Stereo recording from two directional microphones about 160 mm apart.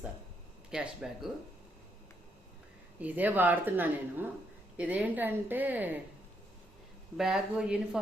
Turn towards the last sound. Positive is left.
turn(degrees=-5)  # may be behind; listen again after turning